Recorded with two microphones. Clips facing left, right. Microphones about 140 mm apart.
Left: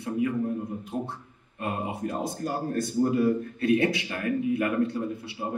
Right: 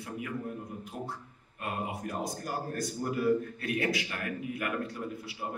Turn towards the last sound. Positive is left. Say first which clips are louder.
# left 6 dB
turn(degrees=25)  # may be behind; listen again after turning